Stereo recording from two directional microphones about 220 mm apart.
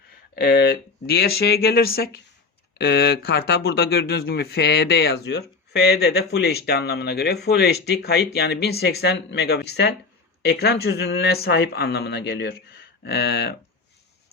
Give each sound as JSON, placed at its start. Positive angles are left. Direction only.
{"t": 0.3, "sound": "speech", "side_deg": 45}